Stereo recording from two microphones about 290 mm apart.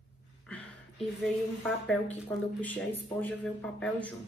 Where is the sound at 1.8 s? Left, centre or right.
Centre.